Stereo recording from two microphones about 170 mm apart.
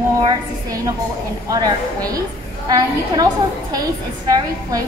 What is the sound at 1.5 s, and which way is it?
Child singing, 20° right (ahead or behind).